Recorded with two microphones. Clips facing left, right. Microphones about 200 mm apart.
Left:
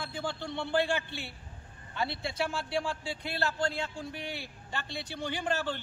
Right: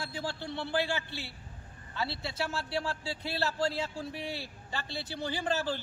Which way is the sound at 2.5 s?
5° right (ahead or behind).